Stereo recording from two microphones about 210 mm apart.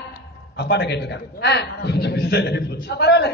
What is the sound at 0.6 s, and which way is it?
A man's voice, 55° left (ahead or behind).